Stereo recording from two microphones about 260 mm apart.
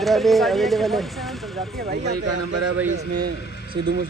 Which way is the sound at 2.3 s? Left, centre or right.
Right.